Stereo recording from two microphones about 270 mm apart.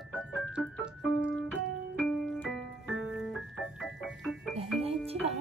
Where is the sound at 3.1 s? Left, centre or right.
Centre.